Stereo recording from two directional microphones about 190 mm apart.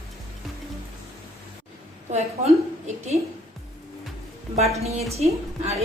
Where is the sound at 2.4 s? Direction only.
35° right (ahead or behind).